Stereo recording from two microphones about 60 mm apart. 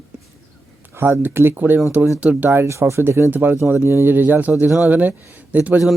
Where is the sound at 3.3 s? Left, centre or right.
Right.